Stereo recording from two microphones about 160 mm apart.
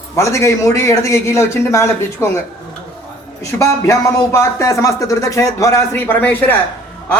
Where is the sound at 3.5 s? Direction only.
20° left (ahead or behind).